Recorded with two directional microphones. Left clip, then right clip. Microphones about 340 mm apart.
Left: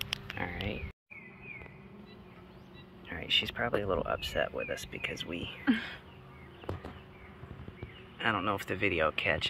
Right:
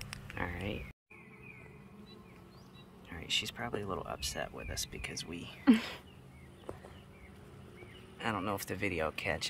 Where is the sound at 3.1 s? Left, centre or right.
Centre.